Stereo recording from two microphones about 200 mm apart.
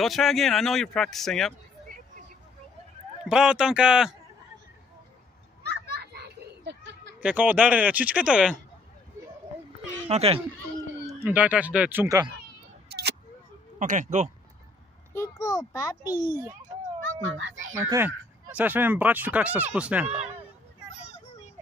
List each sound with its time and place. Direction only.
0.0 s speech: centre (ahead or behind)
1.9 s vehicle: 40° right (ahead or behind)
3.3 s speech: 5° right (ahead or behind)
5.6 s children playing: 55° right (ahead or behind)
7.2 s speech: 5° right (ahead or behind)
10.0 s speech: 30° right (ahead or behind)
11.1 s speech: 10° right (ahead or behind)
12.8 s a sound: 55° right (ahead or behind)
13.7 s speech: 40° right (ahead or behind)
15.1 s a child's voice: 15° left (ahead or behind)
16.1 s speech: 10° right (ahead or behind)
17.0 s speech: 75° right (ahead or behind)
17.8 s speech: 10° right (ahead or behind)